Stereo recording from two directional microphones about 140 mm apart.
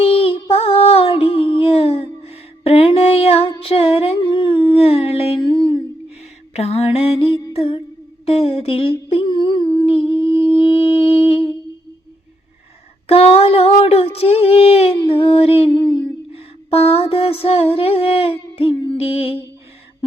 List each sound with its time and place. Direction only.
0.0 s a sound: 40° left (ahead or behind)
6.5 s mantra: 50° left (ahead or behind)
7.5 s music: 40° left (ahead or behind)
8.2 s humming: 40° left (ahead or behind)
13.1 s child singing: 45° left (ahead or behind)